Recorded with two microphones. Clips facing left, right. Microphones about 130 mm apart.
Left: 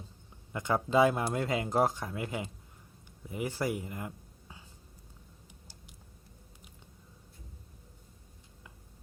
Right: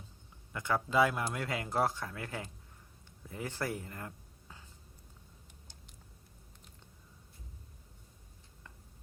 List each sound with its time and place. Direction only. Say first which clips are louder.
0.5 s speech: left 3 dB; 20° left (ahead or behind)